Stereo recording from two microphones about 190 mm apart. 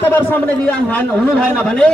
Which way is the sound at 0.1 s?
10° left (ahead or behind).